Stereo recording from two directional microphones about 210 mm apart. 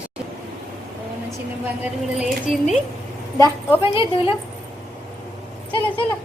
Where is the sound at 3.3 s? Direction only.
15° left (ahead or behind).